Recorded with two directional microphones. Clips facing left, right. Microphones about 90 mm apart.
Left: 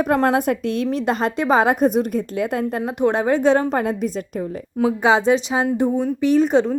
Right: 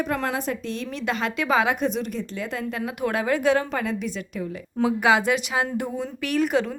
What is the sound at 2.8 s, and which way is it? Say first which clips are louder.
A woman's voice: left 6 dB; 30° left (ahead or behind).